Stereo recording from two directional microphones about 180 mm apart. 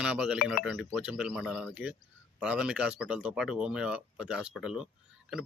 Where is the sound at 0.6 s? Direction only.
Centre (ahead or behind).